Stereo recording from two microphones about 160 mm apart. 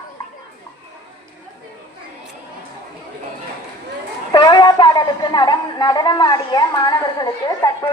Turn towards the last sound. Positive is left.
turn(degrees=25)  # may be behind; listen again after turning